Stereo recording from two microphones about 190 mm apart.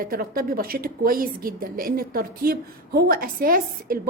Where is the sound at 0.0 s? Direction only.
50° right (ahead or behind).